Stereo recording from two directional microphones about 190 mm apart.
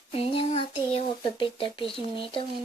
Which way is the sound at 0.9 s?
30° left (ahead or behind).